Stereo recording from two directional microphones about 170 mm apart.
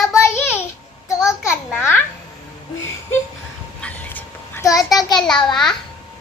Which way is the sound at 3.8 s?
10° left (ahead or behind).